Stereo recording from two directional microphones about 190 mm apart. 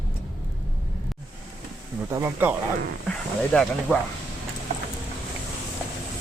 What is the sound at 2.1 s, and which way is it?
Speech, 10° right (ahead or behind).